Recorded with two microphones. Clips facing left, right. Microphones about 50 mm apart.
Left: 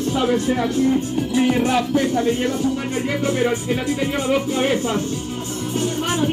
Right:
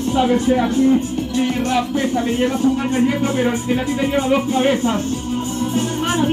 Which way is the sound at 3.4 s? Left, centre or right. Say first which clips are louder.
Right 1 dB; centre.